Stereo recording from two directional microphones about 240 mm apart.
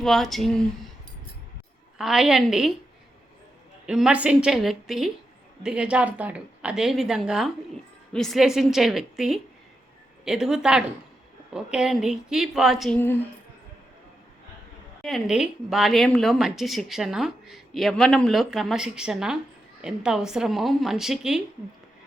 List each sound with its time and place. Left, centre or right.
0.0 s a woman's voice: centre
2.0 s a woman's voice: centre
3.8 s a woman's voice: centre
15.0 s a woman's voice: centre